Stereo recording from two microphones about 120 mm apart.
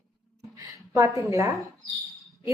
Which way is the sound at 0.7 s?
25° right (ahead or behind).